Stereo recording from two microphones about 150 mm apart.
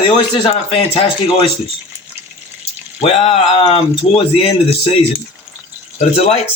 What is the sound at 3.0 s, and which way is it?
Speech, 40° left (ahead or behind).